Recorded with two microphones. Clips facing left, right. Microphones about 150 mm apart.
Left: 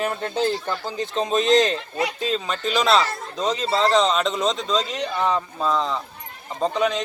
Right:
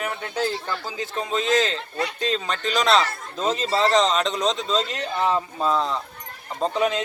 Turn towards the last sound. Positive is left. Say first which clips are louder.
# left 1 dB
turn(degrees=0)  # may be behind; listen again after turning